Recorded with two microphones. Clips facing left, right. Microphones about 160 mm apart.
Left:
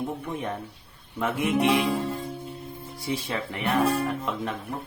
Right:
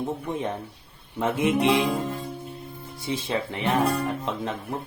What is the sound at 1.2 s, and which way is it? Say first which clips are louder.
Speech: right 3 dB; 20° right (ahead or behind).